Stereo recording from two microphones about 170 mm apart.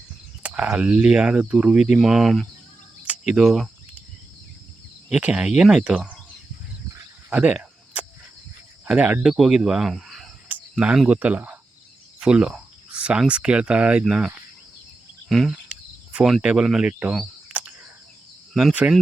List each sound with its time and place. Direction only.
0.4 s speech: 10° right (ahead or behind)
3.0 s cricket: 5° right (ahead or behind)
5.0 s speech: 5° right (ahead or behind)
7.3 s cricket: 5° right (ahead or behind)
8.8 s speech: 10° right (ahead or behind)
17.0 s camera: 5° right (ahead or behind)
18.5 s speech: 5° right (ahead or behind)